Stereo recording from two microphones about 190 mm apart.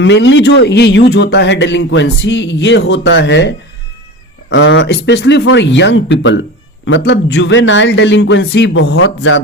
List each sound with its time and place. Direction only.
0.0 s speech: 70° left (ahead or behind)